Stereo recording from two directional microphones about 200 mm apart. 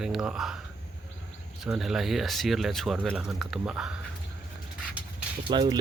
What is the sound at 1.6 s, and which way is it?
Speech, centre (ahead or behind).